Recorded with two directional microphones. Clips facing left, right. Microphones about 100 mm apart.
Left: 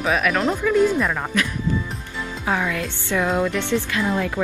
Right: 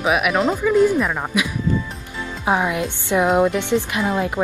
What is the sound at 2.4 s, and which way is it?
A woman's voice, 20° right (ahead or behind).